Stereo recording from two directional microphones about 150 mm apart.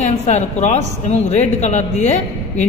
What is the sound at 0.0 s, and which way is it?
Speech, 45° left (ahead or behind).